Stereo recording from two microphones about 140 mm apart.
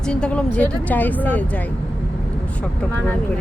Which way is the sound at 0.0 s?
5° left (ahead or behind).